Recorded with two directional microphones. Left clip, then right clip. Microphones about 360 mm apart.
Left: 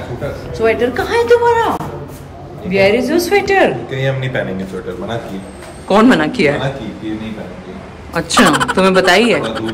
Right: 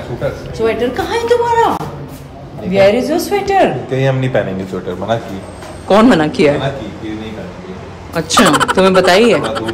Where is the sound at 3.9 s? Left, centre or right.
Centre.